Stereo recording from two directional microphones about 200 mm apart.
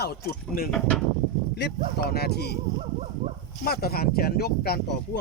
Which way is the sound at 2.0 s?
50° left (ahead or behind).